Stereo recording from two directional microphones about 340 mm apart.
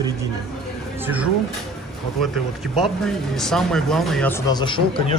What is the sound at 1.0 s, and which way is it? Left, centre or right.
Speech, centre.